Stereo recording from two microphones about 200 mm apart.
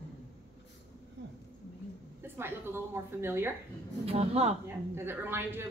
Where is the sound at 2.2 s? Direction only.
10° right (ahead or behind).